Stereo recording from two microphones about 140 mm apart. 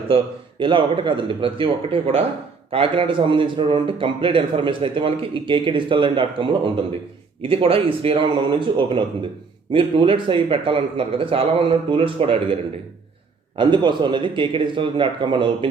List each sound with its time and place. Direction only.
0.6 s a man's voice: 35° right (ahead or behind)
13.6 s a man's voice: 35° right (ahead or behind)